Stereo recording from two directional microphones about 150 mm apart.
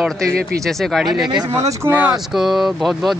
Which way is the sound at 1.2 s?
30° right (ahead or behind).